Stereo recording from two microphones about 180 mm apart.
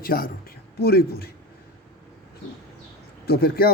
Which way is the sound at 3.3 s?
55° left (ahead or behind).